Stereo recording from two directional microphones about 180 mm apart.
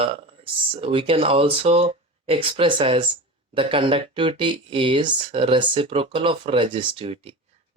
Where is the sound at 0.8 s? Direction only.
30° right (ahead or behind).